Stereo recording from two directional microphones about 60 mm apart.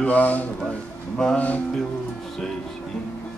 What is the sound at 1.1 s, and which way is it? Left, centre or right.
Music, centre.